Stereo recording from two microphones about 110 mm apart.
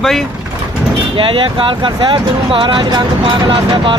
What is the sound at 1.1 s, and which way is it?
Speech, 55° right (ahead or behind).